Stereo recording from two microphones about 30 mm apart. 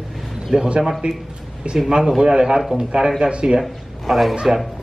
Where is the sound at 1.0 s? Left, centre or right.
Right.